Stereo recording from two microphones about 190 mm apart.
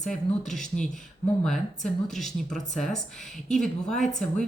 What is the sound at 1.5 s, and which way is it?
Speech, centre (ahead or behind).